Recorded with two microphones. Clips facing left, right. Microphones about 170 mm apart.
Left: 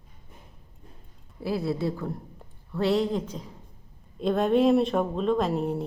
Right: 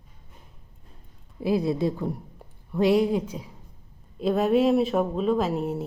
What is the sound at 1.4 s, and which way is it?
Speech, 15° right (ahead or behind).